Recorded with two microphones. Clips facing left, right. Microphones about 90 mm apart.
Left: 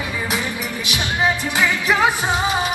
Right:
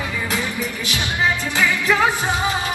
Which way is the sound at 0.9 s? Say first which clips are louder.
Left 2 dB; 20° left (ahead or behind).